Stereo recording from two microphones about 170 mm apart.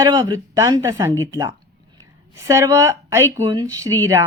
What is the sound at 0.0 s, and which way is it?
A woman's voice, 20° right (ahead or behind).